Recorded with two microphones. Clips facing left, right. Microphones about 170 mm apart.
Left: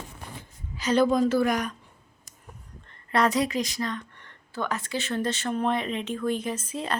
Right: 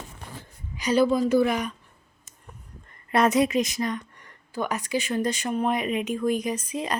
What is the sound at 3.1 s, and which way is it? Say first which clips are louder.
Speech: right 3 dB; 20° right (ahead or behind).